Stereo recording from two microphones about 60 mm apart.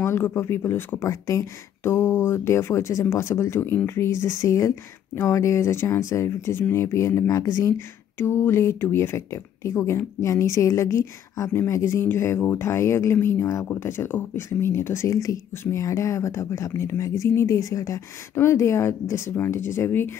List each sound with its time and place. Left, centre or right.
0.0 s speech: left
1.0 s a woman's voice: left
1.8 s a woman's voice: left
8.2 s a woman's voice: left
11.5 s a woman's voice: left
18.3 s speech: left